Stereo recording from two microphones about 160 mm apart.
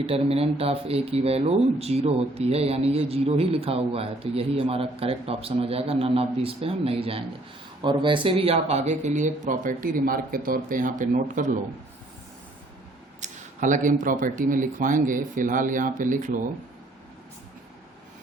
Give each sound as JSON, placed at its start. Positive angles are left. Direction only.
{"t": 0.0, "sound": "speech", "side_deg": -35}
{"t": 13.2, "sound": "speech", "side_deg": -50}